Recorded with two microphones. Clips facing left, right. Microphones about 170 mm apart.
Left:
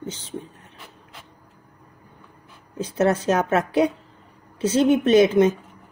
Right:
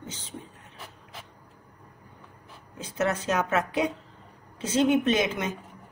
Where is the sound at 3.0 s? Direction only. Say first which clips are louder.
Left 6 dB; 30° left (ahead or behind).